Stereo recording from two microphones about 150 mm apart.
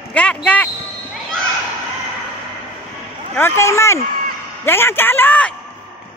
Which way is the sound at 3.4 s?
20° left (ahead or behind).